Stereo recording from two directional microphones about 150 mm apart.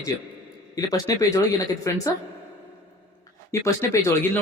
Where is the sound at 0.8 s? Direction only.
25° left (ahead or behind).